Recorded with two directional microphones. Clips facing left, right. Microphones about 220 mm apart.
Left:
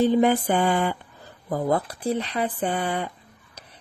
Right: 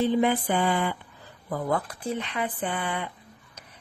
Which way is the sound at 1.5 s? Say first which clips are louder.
Left 4 dB; 35° left (ahead or behind).